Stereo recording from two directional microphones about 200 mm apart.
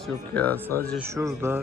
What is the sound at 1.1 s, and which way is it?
Speech, 15° right (ahead or behind).